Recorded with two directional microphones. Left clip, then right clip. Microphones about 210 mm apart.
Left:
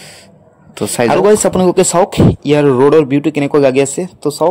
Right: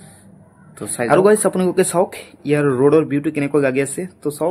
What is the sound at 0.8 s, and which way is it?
Speech, 35° left (ahead or behind).